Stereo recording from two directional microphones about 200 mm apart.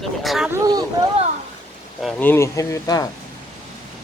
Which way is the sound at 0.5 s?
20° right (ahead or behind).